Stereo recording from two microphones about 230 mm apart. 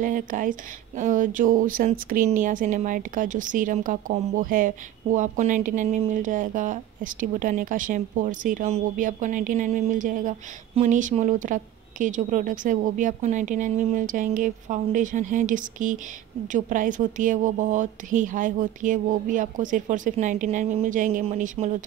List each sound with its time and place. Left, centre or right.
0.0 s a woman's voice: right